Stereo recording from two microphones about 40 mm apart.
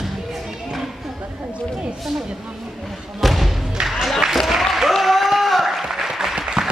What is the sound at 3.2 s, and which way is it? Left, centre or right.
Thump, centre.